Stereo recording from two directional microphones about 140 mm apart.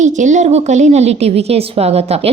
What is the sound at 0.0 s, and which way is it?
A woman's voice, 60° right (ahead or behind).